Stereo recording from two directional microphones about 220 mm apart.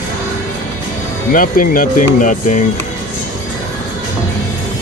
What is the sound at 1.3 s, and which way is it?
Speech, 40° left (ahead or behind).